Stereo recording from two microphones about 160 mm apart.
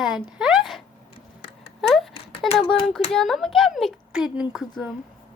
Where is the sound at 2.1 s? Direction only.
35° left (ahead or behind).